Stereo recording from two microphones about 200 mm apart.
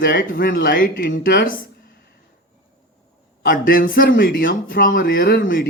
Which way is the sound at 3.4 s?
45° left (ahead or behind).